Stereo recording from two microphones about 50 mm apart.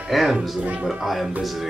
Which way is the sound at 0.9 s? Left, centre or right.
Centre.